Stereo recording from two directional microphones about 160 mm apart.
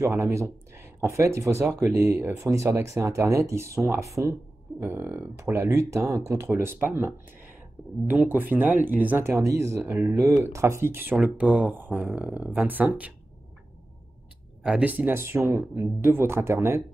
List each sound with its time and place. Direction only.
0.0 s speech: 20° right (ahead or behind)
14.6 s speech: 5° right (ahead or behind)